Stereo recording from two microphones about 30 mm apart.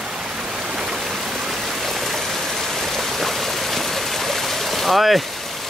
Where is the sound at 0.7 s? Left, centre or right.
Centre.